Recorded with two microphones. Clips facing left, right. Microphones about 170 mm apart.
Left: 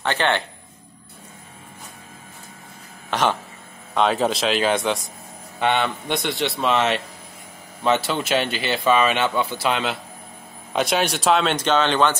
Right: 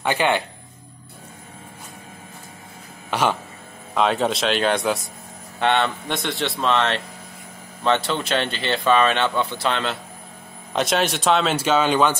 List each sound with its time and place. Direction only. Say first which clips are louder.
0.0 s speech: right 1 dB; 10° right (ahead or behind)
3.1 s a sound: even; 10° right (ahead or behind)
3.9 s speech: even; centre (ahead or behind)